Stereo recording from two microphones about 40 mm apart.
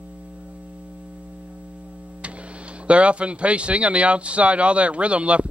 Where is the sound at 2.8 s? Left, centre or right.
Right.